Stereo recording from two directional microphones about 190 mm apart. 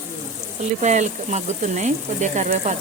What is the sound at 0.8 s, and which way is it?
Speech, 40° right (ahead or behind).